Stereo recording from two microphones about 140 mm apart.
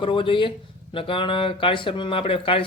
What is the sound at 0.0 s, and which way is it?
Speech, 40° left (ahead or behind).